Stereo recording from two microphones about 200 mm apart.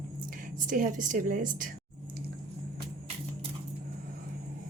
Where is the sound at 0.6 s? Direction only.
40° right (ahead or behind).